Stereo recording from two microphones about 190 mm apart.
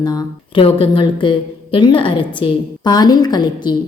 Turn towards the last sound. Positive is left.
turn(degrees=20)  # may be behind; listen again after turning